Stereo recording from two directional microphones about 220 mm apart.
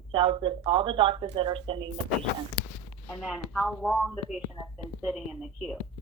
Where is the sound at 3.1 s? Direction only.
5° left (ahead or behind).